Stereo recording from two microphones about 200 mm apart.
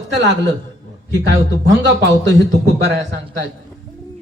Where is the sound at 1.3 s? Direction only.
65° right (ahead or behind).